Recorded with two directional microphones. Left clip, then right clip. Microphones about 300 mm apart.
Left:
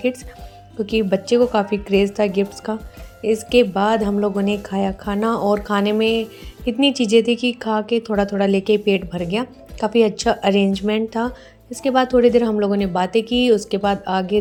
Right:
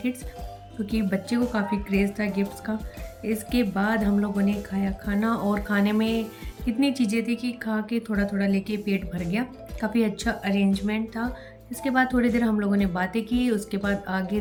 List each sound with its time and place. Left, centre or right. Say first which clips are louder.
0.9 s a woman's voice: left 11 dB; centre